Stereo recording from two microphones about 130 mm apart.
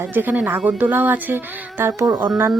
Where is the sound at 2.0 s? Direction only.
30° right (ahead or behind).